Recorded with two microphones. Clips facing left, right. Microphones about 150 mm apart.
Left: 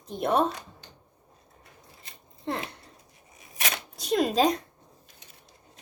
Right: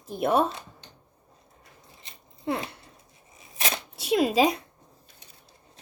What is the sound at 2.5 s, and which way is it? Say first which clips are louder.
Speech: right 3 dB; 5° right (ahead or behind).